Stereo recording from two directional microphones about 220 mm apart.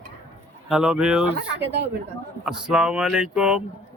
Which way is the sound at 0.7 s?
5° right (ahead or behind).